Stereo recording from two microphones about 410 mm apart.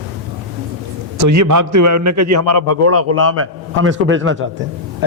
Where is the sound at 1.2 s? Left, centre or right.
Right.